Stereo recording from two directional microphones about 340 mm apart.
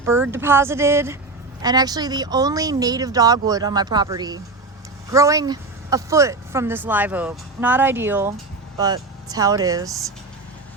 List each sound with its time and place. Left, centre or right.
0.0 s speech: centre